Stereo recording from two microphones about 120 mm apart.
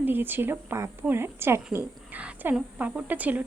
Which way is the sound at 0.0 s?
15° right (ahead or behind).